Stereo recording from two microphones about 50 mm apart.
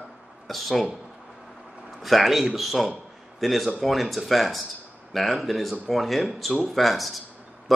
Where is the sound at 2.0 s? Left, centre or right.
Centre.